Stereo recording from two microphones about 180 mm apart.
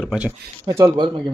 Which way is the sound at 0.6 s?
15° right (ahead or behind).